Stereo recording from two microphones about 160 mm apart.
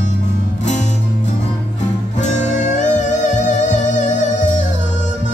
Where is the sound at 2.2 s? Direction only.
45° left (ahead or behind).